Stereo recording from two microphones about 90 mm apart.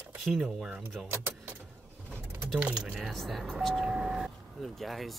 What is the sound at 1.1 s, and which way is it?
Vehicle, 25° right (ahead or behind).